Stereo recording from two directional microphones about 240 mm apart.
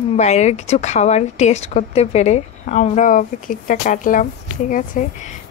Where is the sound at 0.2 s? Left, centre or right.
Left.